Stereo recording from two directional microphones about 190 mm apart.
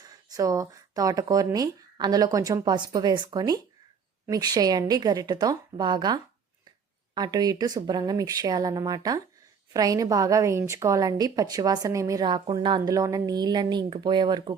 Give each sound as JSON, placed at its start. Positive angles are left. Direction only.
{"t": 0.0, "sound": "a woman's voice", "side_deg": -20}